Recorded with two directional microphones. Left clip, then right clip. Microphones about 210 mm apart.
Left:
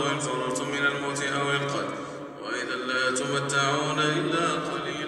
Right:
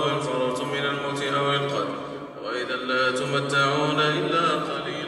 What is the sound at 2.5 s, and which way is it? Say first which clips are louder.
Mantra: right 3 dB; 55° left (ahead or behind).